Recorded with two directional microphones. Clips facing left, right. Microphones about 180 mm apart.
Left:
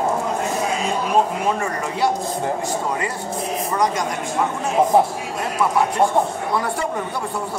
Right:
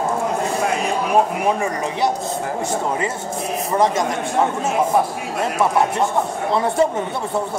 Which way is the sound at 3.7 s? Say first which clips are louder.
Right 4 dB; 25° right (ahead or behind).